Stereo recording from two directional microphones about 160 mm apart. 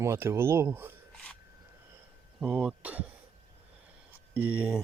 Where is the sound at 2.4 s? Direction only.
10° right (ahead or behind).